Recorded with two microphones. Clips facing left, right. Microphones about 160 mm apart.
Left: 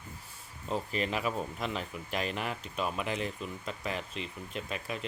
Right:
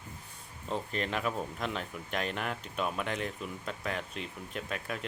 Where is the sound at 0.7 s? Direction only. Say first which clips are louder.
Left 1 dB; 5° left (ahead or behind).